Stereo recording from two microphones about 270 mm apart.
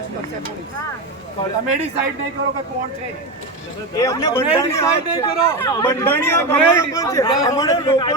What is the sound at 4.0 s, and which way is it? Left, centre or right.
Speech, centre.